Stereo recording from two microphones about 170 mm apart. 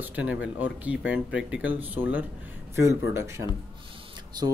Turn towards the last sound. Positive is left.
turn(degrees=-25)  # may be behind; listen again after turning